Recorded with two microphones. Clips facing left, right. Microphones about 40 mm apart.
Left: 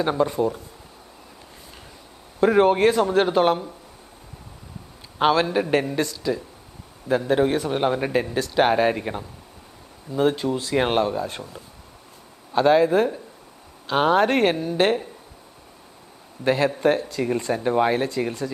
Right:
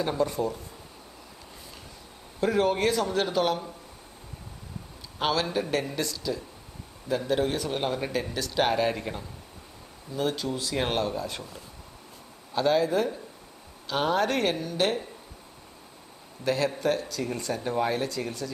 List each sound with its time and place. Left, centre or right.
0.0 s speech: left
0.3 s speech: centre
2.4 s speech: left
5.2 s speech: left
12.5 s speech: left
14.5 s speech: left
14.8 s speech: left
16.4 s speech: left